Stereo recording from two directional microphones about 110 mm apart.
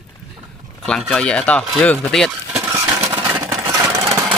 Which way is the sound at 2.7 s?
25° right (ahead or behind).